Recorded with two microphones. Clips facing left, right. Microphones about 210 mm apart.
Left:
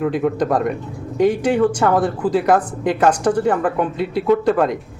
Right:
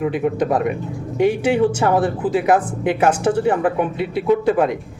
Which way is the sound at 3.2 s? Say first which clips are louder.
Even; 10° right (ahead or behind).